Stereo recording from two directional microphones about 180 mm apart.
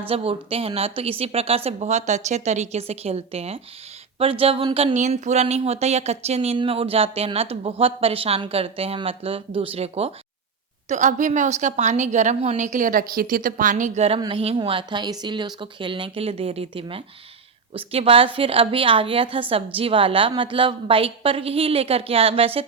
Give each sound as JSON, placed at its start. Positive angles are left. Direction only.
{"t": 0.1, "sound": "a woman's voice", "side_deg": -30}